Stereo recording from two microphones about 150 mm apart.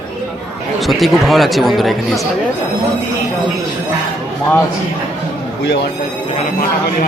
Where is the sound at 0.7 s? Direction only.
Centre (ahead or behind).